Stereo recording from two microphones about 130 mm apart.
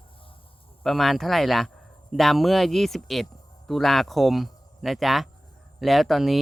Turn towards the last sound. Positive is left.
turn(degrees=0)  # may be behind; listen again after turning